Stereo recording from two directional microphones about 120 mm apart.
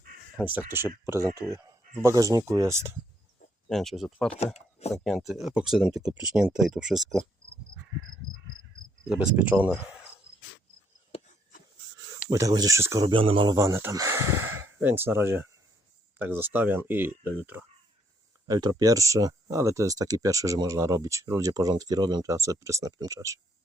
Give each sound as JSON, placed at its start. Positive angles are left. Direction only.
{"t": 0.3, "sound": "speech", "side_deg": -15}
{"t": 1.2, "sound": "speech", "side_deg": 20}
{"t": 1.5, "sound": "a sound", "side_deg": -30}
{"t": 2.0, "sound": "speech", "side_deg": -30}
{"t": 3.7, "sound": "speech", "side_deg": 0}
{"t": 4.5, "sound": "a sound", "side_deg": 65}
{"t": 5.0, "sound": "speech", "side_deg": 0}
{"t": 9.0, "sound": "speech", "side_deg": -10}
{"t": 12.3, "sound": "speech", "side_deg": -30}
{"t": 13.1, "sound": "speech", "side_deg": -45}
{"t": 13.6, "sound": "speech", "side_deg": -20}
{"t": 18.4, "sound": "speech", "side_deg": -35}